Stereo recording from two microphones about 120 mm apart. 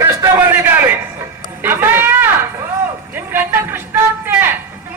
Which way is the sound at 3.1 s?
15° right (ahead or behind).